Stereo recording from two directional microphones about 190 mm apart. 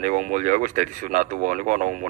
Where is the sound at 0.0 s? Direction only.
40° right (ahead or behind).